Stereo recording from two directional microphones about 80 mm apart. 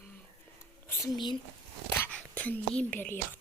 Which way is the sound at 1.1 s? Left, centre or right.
Left.